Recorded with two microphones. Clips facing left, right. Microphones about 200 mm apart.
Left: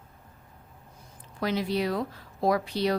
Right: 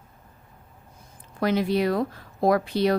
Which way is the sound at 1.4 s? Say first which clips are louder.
Right 5 dB; 55° right (ahead or behind).